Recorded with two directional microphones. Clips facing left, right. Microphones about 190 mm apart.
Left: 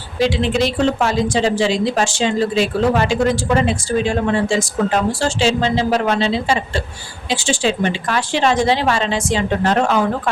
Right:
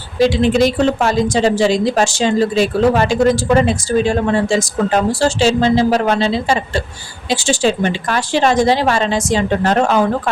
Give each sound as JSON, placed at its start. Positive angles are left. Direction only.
{"t": 0.2, "sound": "a woman's voice", "side_deg": -40}